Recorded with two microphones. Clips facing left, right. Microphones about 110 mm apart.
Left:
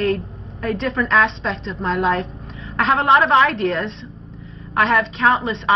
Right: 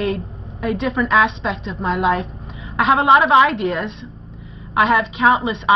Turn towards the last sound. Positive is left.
turn(degrees=-10)  # may be behind; listen again after turning